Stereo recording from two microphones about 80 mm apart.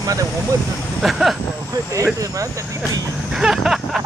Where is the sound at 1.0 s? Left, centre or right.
Centre.